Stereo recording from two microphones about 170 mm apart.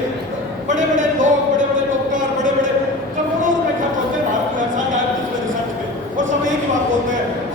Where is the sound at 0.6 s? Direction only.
45° right (ahead or behind).